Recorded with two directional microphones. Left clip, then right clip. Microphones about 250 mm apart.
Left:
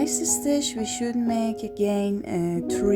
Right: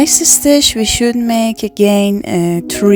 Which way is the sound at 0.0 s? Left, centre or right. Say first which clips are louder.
Right 14 dB; right.